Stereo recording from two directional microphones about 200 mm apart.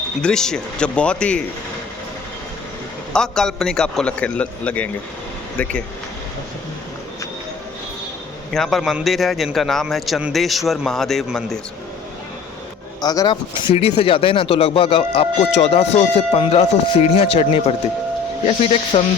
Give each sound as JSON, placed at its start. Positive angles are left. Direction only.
{"t": 0.2, "sound": "a man's voice", "side_deg": 5}
{"t": 3.1, "sound": "a man's voice", "side_deg": 5}
{"t": 8.5, "sound": "a man's voice", "side_deg": 0}
{"t": 13.0, "sound": "speech", "side_deg": 20}